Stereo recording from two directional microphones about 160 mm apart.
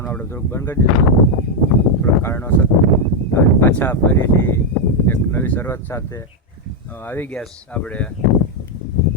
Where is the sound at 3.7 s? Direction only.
10° left (ahead or behind).